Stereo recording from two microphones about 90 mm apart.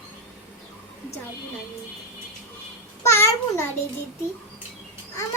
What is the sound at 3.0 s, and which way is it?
Speech, 35° left (ahead or behind).